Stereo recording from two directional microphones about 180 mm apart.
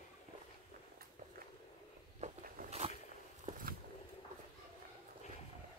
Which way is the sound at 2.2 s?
40° right (ahead or behind).